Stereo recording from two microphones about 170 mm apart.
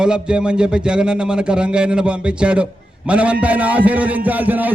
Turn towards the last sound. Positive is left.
turn(degrees=-10)  # may be behind; listen again after turning